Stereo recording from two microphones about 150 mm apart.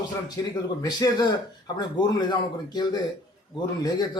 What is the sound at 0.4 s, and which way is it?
Speech, 20° left (ahead or behind).